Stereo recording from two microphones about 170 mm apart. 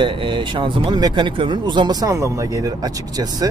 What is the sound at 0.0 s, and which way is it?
Speech, 30° right (ahead or behind).